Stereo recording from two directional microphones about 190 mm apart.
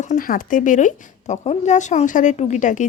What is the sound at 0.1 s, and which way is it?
Speech, 45° left (ahead or behind).